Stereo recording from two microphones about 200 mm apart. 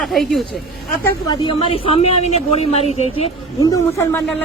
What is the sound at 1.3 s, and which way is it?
Speech, 25° left (ahead or behind).